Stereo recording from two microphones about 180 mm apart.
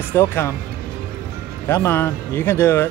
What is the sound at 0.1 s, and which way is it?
Speech, 15° left (ahead or behind).